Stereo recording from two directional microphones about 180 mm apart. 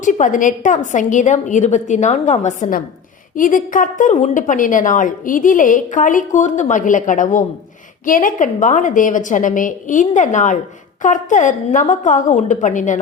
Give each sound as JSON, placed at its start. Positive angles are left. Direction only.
{"t": 0.0, "sound": "a woman's voice", "side_deg": 45}